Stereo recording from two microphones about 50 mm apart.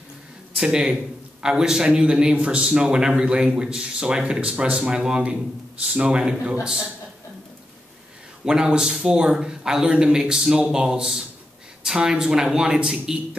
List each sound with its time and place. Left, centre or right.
0.6 s speech: centre
8.5 s speech: centre